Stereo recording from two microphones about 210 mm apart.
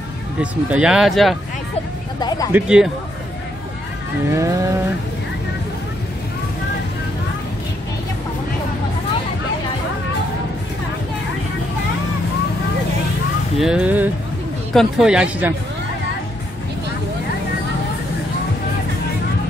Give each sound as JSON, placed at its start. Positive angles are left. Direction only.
{"t": 0.4, "sound": "speech", "side_deg": -5}
{"t": 2.1, "sound": "speech", "side_deg": 20}
{"t": 2.5, "sound": "speech", "side_deg": -5}
{"t": 4.3, "sound": "vehicle", "side_deg": -15}
{"t": 13.6, "sound": "speech", "side_deg": -5}